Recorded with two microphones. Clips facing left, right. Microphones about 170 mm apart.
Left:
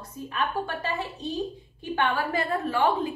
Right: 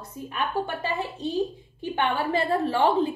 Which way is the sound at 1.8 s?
20° right (ahead or behind).